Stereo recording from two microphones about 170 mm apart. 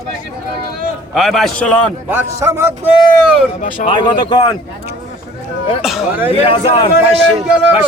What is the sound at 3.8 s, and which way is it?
Speech, 25° left (ahead or behind).